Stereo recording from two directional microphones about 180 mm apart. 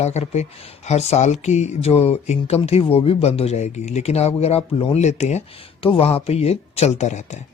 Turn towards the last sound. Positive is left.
turn(degrees=40)  # may be behind; listen again after turning